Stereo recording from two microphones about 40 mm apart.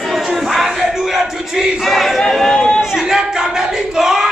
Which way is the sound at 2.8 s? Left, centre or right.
Centre.